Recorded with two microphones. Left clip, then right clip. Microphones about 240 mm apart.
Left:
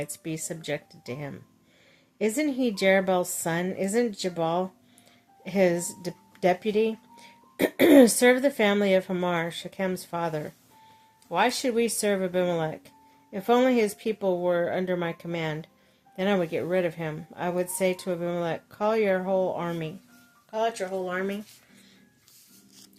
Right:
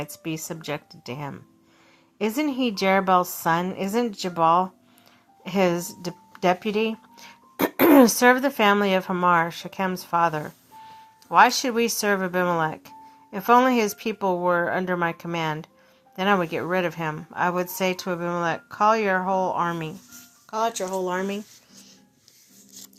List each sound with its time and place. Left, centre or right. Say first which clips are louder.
0.0 s a woman's voice: right 2 dB; centre
20.7 s speech: right 4 dB; right